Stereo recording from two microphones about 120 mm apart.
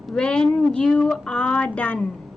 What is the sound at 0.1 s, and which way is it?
Speech, 5° left (ahead or behind).